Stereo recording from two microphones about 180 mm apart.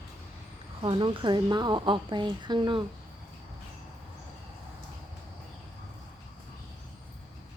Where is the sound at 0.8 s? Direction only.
25° right (ahead or behind).